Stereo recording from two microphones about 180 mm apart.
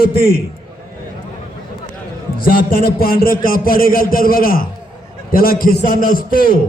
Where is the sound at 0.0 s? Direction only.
55° left (ahead or behind).